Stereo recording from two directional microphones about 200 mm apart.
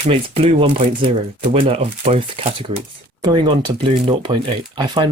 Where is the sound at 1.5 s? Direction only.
30° right (ahead or behind).